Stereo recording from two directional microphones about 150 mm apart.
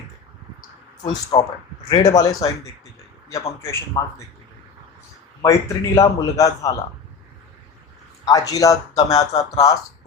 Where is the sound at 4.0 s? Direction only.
20° left (ahead or behind).